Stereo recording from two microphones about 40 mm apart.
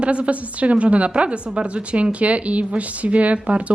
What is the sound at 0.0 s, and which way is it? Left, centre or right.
A woman's voice, right.